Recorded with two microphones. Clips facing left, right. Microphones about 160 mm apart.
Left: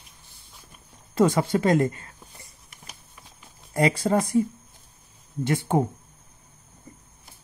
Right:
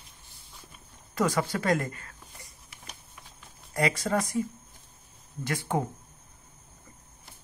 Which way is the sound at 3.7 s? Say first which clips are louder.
Left 5 dB; 30° left (ahead or behind).